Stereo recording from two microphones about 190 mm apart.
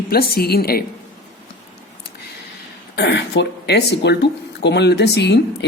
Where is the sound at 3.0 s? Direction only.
65° left (ahead or behind).